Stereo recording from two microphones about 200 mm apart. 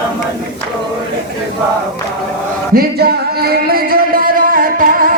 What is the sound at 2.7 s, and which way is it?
Music, 50° right (ahead or behind).